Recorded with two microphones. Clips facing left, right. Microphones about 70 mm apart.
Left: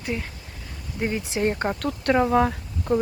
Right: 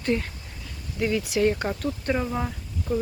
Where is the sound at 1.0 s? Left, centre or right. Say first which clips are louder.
Right 2 dB; left.